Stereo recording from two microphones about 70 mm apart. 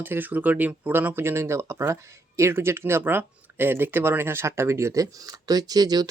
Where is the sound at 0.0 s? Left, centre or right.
Right.